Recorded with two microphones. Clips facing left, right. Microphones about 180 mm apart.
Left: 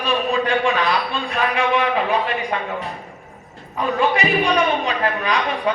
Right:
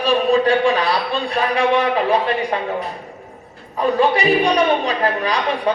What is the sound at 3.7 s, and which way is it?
A man's voice, 35° right (ahead or behind).